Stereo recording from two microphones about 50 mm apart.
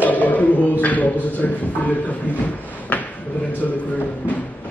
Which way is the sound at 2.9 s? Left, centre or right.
Left.